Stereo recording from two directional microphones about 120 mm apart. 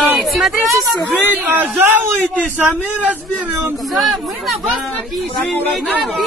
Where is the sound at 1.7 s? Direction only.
20° right (ahead or behind).